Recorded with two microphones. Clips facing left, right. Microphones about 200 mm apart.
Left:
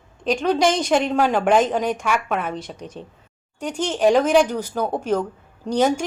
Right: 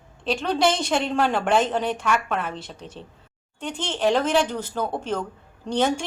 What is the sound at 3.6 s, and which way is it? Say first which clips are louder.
Speech: left 5 dB; 45° left (ahead or behind).